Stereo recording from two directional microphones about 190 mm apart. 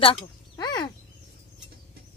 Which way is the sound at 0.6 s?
20° left (ahead or behind).